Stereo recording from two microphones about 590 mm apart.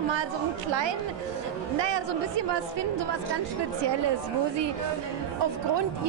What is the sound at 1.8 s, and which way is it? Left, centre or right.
Speech, right.